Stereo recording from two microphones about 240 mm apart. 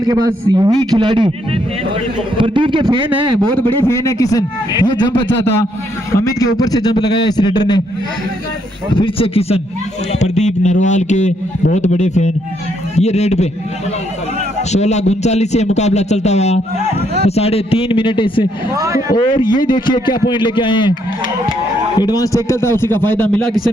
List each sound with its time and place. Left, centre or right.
0.0 s a man's voice: centre
2.4 s a man's voice: centre
3.7 s a man's voice: centre
8.9 s speech: left
14.7 s speech: left
18.8 s a man's voice: centre
19.1 s speech: centre
21.9 s a man's voice: centre